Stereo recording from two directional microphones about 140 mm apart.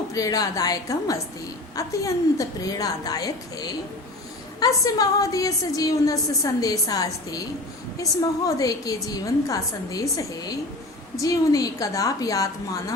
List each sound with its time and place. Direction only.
0.1 s a woman's voice: 25° left (ahead or behind)
8.4 s a woman's voice: 25° left (ahead or behind)